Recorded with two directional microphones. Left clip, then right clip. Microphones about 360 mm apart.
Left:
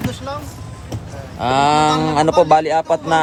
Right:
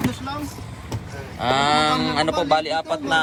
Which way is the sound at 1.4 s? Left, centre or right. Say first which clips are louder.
Left 4 dB; centre.